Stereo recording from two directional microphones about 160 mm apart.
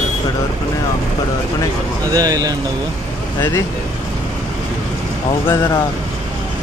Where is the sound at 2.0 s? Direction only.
25° right (ahead or behind).